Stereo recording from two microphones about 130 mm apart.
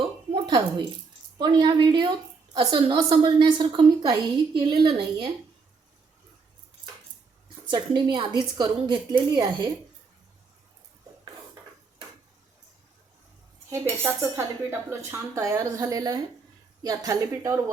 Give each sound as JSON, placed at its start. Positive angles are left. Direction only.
{"t": 1.4, "sound": "a woman's voice", "side_deg": -35}
{"t": 7.7, "sound": "a woman's voice", "side_deg": -35}
{"t": 13.7, "sound": "speech", "side_deg": -20}